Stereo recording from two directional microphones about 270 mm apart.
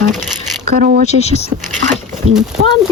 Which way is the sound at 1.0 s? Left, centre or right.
Left.